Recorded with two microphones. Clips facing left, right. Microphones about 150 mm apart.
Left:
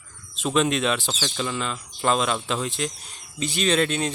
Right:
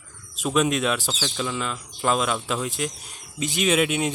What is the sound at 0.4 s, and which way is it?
Speech, 5° right (ahead or behind).